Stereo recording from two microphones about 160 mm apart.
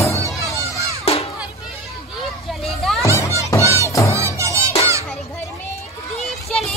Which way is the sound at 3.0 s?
20° left (ahead or behind).